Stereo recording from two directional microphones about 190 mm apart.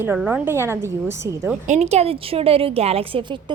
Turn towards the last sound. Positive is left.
turn(degrees=-25)  # may be behind; listen again after turning